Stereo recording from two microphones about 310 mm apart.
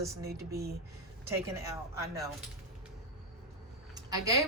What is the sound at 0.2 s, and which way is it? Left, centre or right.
Speech, right.